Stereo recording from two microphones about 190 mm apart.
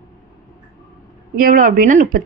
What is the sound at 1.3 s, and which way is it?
Speech, 45° right (ahead or behind).